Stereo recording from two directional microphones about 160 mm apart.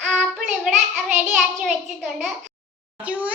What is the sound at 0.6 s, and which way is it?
A child's voice, 10° right (ahead or behind).